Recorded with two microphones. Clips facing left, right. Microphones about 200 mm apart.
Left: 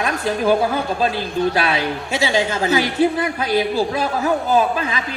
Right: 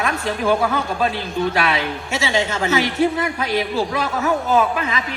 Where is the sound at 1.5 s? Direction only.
30° left (ahead or behind).